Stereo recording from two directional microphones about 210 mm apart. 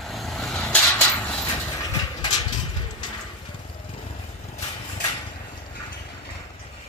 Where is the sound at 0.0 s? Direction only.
Centre (ahead or behind).